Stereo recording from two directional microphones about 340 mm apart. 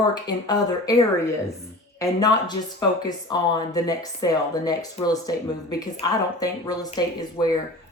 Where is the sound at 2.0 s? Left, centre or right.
Centre.